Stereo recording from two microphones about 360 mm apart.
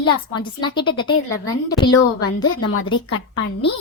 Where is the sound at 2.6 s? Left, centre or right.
Left.